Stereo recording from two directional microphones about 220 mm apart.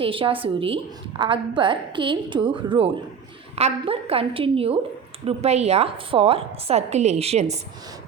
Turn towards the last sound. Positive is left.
turn(degrees=-30)  # may be behind; listen again after turning